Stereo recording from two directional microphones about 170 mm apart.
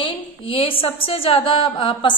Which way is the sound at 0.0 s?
35° left (ahead or behind).